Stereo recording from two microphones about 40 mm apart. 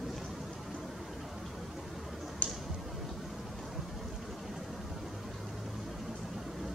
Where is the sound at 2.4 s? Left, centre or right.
Left.